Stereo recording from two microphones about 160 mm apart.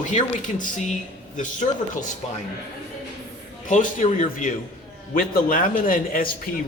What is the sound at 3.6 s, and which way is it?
A man's voice, 50° left (ahead or behind).